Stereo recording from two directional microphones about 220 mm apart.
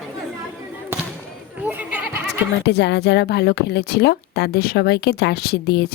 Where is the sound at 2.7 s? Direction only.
50° left (ahead or behind).